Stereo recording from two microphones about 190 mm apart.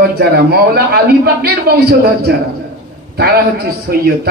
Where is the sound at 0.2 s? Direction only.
55° right (ahead or behind).